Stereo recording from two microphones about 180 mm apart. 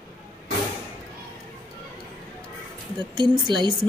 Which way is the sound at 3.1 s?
25° right (ahead or behind).